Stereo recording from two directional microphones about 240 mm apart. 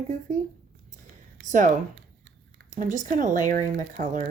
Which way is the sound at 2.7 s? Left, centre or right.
Right.